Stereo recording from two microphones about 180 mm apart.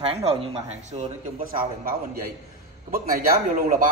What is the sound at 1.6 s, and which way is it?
A man's voice, 55° right (ahead or behind).